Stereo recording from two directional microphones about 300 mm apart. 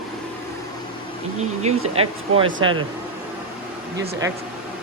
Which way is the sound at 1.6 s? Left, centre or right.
Centre.